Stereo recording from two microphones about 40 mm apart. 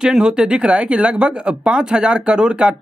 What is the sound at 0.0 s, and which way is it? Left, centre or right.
Speech, centre.